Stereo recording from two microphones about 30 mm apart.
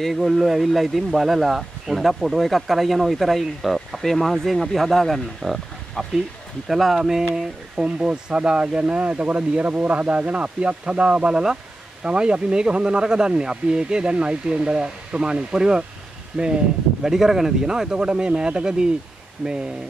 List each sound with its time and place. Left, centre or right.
0.1 s speech: centre
7.0 s speech: centre
7.8 s speech: right
16.3 s speech: centre
17.6 s speech: right